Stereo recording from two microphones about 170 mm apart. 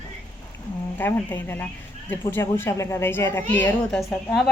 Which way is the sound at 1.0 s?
10° left (ahead or behind).